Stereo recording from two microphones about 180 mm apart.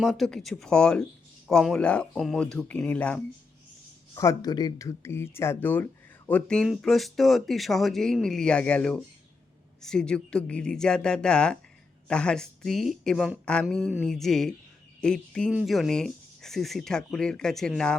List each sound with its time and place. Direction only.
0.0 s speech: centre (ahead or behind)
4.1 s speech: 20° left (ahead or behind); by 17.9 s centre (ahead or behind)